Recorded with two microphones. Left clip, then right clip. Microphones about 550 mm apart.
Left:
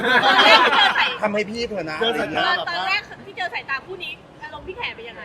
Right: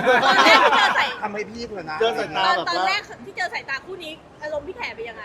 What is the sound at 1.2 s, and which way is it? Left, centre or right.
Speech, left.